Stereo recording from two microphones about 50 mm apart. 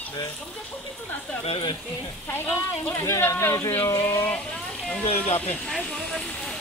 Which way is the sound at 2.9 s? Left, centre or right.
Left.